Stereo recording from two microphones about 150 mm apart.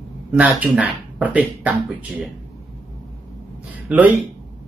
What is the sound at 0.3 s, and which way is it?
Speech, 5° right (ahead or behind).